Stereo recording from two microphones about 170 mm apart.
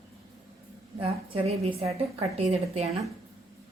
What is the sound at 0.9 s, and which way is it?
A woman's voice, 35° right (ahead or behind).